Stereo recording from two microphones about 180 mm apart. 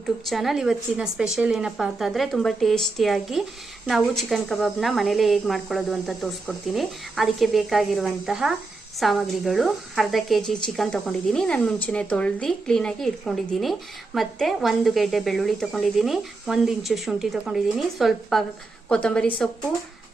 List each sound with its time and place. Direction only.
0.0 s speech: centre (ahead or behind)